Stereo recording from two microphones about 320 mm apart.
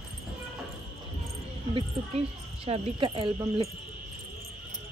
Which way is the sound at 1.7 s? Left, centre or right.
Centre.